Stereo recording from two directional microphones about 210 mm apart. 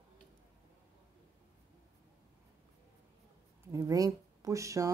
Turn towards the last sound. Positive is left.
turn(degrees=-15)  # may be behind; listen again after turning